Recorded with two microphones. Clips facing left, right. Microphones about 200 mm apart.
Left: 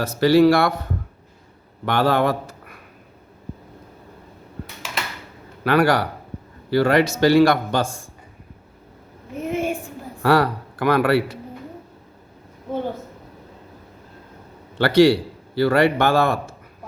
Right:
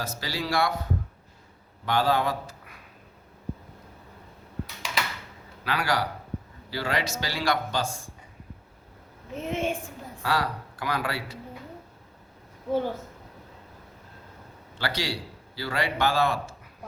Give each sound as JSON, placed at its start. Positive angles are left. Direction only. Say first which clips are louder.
{"t": 0.0, "sound": "a man's voice", "louder": "left 18 dB", "side_deg": 60}
{"t": 1.8, "sound": "a man's voice", "louder": "left 6 dB", "side_deg": 65}
{"t": 5.6, "sound": "a man's voice", "louder": "left 10 dB", "side_deg": 55}
{"t": 9.5, "sound": "a sound", "louder": "left 5 dB", "side_deg": 10}
{"t": 10.2, "sound": "a man's voice", "louder": "left 10 dB", "side_deg": 60}
{"t": 14.8, "sound": "a man's voice", "louder": "left 17 dB", "side_deg": 60}